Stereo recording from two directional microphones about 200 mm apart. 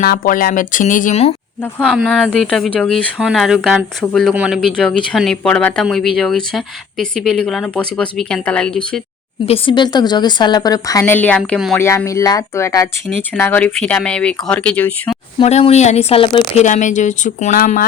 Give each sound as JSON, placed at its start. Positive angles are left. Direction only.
{"t": 0.0, "sound": "speech", "side_deg": 45}
{"t": 1.8, "sound": "speech", "side_deg": 0}
{"t": 9.5, "sound": "a woman's voice", "side_deg": 25}
{"t": 11.8, "sound": "speech", "side_deg": 10}
{"t": 15.4, "sound": "speech", "side_deg": 30}
{"t": 16.6, "sound": "speech", "side_deg": 35}